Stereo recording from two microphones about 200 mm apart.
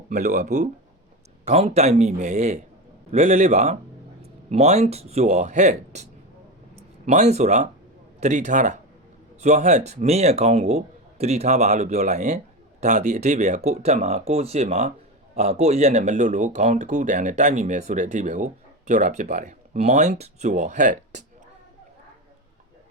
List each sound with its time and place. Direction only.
0.1 s speech: 40° right (ahead or behind)